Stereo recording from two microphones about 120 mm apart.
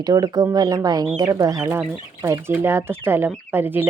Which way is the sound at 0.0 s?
30° right (ahead or behind).